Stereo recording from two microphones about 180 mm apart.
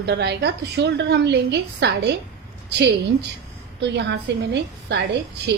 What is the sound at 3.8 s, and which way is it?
A woman's voice, 75° right (ahead or behind).